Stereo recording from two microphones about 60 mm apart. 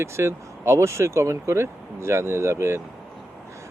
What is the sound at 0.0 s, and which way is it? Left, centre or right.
Speech, right.